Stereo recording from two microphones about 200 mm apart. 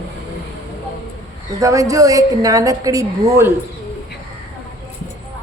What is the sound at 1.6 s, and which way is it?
A woman's voice, 15° right (ahead or behind).